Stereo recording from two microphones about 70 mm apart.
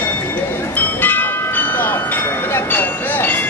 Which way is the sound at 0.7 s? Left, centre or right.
Left.